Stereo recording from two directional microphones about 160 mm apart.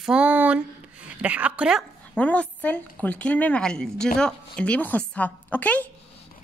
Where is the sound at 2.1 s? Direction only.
10° left (ahead or behind).